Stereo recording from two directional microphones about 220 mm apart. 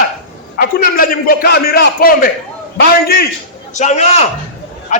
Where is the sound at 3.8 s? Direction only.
30° left (ahead or behind).